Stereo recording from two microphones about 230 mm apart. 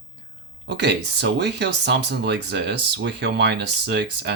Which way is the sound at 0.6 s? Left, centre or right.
Right.